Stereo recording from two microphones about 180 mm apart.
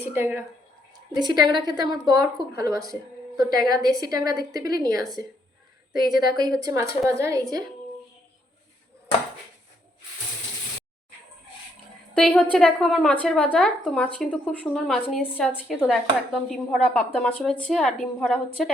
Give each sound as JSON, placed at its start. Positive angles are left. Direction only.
{"t": 0.0, "sound": "speech", "side_deg": -10}
{"t": 1.2, "sound": "a woman's voice", "side_deg": -25}
{"t": 5.9, "sound": "speech", "side_deg": 0}
{"t": 6.2, "sound": "a woman's voice", "side_deg": -25}
{"t": 12.1, "sound": "speech", "side_deg": 5}